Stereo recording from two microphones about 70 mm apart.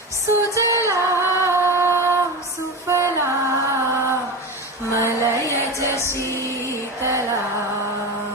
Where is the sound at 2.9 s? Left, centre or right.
Right.